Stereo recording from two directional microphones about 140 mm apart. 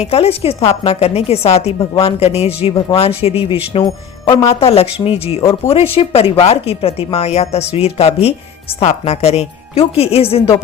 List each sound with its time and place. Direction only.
0.0 s a woman's voice: 45° left (ahead or behind)